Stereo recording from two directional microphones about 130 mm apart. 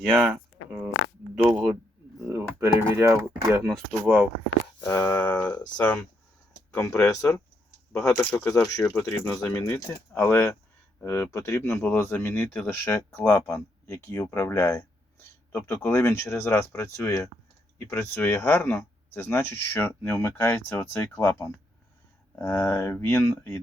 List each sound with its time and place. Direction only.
0.0 s speech: 10° right (ahead or behind)
2.3 s typing: 20° right (ahead or behind)
2.7 s speech: 20° right (ahead or behind)
3.7 s speech: 5° left (ahead or behind)
4.8 s speech: 20° left (ahead or behind)
5.2 s speech: 10° left (ahead or behind)
6.7 s speech: 25° left (ahead or behind)
8.2 s speech: 10° left (ahead or behind)
8.4 s speech: 25° left (ahead or behind)